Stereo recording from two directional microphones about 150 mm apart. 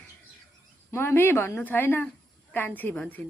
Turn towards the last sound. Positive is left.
turn(degrees=10)  # may be behind; listen again after turning